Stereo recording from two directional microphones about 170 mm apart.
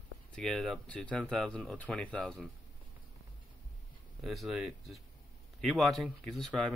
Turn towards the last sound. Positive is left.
turn(degrees=0)  # may be behind; listen again after turning